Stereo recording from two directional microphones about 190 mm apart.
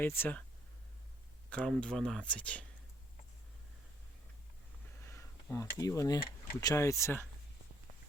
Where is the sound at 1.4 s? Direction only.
5° left (ahead or behind).